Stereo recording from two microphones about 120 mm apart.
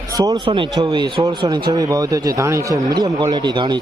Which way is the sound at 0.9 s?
35° right (ahead or behind).